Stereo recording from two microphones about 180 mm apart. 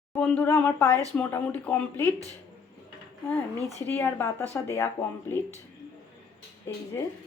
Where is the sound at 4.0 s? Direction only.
10° left (ahead or behind).